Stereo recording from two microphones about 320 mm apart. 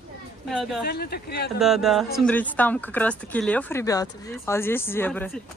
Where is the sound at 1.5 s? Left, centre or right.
Centre.